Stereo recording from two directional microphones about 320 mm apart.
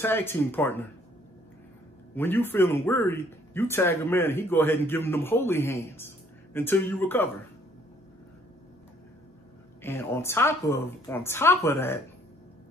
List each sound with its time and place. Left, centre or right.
0.0 s speech: centre
2.1 s speech: centre
9.8 s speech: centre